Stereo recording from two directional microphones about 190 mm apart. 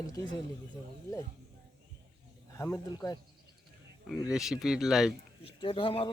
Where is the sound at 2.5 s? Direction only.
15° left (ahead or behind).